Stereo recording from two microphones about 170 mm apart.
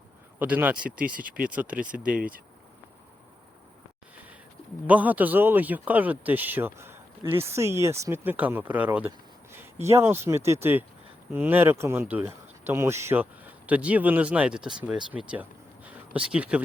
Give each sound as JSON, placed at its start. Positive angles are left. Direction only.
{"t": 0.3, "sound": "speech", "side_deg": -10}
{"t": 0.8, "sound": "speech", "side_deg": -55}
{"t": 1.0, "sound": "speech", "side_deg": -10}
{"t": 4.9, "sound": "speech", "side_deg": -10}